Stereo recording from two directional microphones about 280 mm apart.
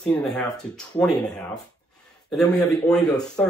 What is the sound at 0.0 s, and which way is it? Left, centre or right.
Speech, centre.